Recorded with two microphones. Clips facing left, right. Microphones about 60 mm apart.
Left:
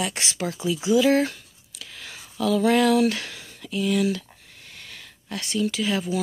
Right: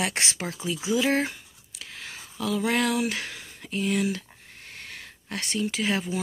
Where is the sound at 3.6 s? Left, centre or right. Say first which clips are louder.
Left 3 dB; right.